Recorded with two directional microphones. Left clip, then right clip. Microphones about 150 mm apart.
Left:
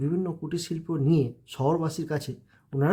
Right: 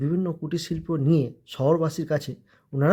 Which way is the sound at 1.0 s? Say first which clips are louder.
Right 1 dB; 20° right (ahead or behind).